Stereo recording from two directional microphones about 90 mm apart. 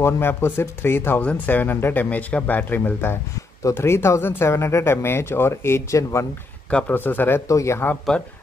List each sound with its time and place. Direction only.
0.0 s speech: 25° left (ahead or behind)
6.9 s speech: 20° left (ahead or behind)
7.4 s speech: 35° left (ahead or behind)
8.1 s speech: 10° left (ahead or behind)